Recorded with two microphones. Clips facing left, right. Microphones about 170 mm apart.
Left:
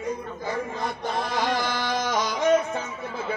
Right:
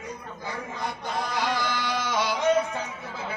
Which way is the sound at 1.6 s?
45° left (ahead or behind).